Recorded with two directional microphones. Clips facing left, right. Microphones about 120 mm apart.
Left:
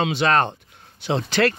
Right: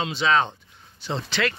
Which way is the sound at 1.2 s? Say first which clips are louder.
Left 6 dB; 45° left (ahead or behind).